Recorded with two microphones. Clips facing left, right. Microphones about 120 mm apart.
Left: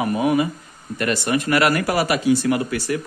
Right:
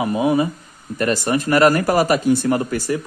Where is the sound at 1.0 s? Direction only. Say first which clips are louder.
Right 2 dB; 40° right (ahead or behind).